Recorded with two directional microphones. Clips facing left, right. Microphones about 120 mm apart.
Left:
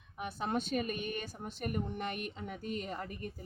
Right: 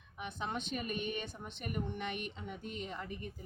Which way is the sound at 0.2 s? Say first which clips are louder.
Left 4 dB; 40° left (ahead or behind).